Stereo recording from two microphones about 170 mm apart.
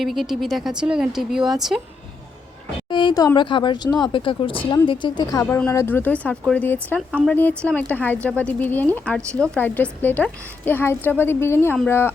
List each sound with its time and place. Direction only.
0.0 s speech: centre (ahead or behind)
2.9 s speech: 25° left (ahead or behind)